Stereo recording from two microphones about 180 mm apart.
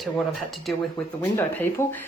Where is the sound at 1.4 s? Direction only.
10° left (ahead or behind).